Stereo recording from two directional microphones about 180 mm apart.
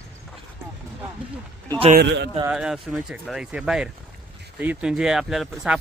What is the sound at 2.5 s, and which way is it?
Speech, 5° right (ahead or behind).